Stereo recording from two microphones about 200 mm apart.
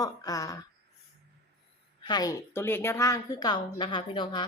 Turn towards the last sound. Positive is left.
turn(degrees=25)  # may be behind; listen again after turning